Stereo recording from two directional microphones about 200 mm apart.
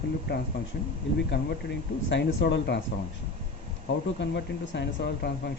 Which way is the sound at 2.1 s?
60° left (ahead or behind).